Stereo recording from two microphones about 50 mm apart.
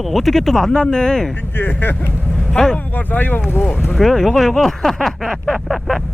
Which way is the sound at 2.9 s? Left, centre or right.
Left.